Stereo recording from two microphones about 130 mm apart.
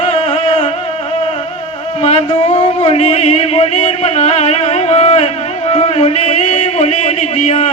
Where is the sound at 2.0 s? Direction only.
55° left (ahead or behind).